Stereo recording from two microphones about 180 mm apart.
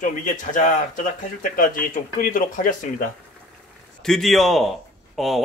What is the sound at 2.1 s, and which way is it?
Speech, 50° left (ahead or behind).